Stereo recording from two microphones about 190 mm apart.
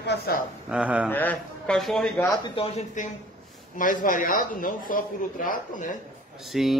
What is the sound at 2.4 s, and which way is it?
Speech, 30° left (ahead or behind).